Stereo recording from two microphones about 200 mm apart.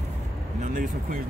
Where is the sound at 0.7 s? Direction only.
40° right (ahead or behind).